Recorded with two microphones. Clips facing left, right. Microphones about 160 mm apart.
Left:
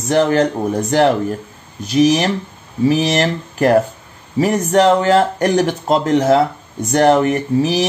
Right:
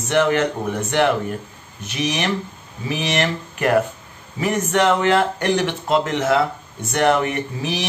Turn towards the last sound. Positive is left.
turn(degrees=35)  # may be behind; listen again after turning